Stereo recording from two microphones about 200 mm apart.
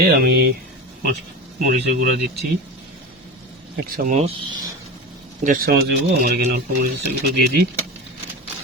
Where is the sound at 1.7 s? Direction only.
45° right (ahead or behind).